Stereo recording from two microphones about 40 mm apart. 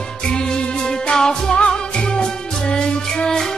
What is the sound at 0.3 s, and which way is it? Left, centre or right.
Music, left.